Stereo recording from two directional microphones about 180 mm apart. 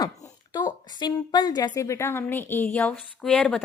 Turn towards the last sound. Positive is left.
turn(degrees=5)  # may be behind; listen again after turning